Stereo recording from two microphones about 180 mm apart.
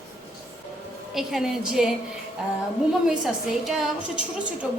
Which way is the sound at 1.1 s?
Centre (ahead or behind).